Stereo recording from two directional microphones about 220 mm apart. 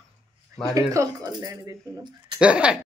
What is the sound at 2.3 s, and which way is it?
Speech, 5° right (ahead or behind).